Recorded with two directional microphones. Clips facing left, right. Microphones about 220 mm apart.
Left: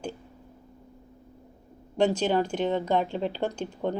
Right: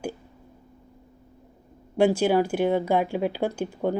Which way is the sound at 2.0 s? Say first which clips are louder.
Right 4 dB; 10° right (ahead or behind).